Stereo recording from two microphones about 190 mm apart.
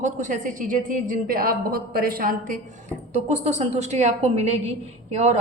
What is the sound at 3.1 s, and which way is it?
A man's voice, 35° right (ahead or behind).